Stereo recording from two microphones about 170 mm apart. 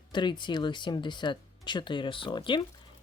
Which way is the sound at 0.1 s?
25° left (ahead or behind).